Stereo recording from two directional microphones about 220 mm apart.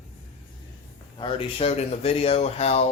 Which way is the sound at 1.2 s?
25° left (ahead or behind).